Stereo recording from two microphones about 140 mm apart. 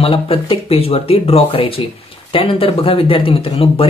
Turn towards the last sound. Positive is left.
turn(degrees=45)  # may be behind; listen again after turning